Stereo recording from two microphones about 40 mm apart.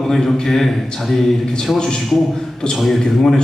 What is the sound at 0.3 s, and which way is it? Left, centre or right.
Mantra, centre.